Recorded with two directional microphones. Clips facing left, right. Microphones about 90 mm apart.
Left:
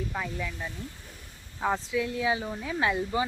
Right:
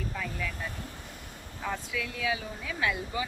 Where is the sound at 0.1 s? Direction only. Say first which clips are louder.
Left 2 dB; 25° left (ahead or behind).